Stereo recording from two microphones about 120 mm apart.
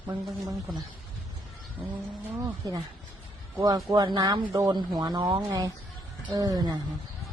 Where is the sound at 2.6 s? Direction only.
35° right (ahead or behind).